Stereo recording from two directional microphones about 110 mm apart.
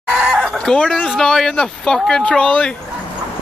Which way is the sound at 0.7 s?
5° left (ahead or behind).